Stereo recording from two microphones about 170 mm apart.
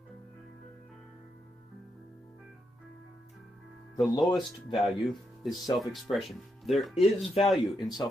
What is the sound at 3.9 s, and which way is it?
Speech, centre (ahead or behind).